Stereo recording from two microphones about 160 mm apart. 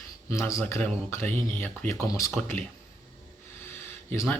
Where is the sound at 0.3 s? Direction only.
20° left (ahead or behind).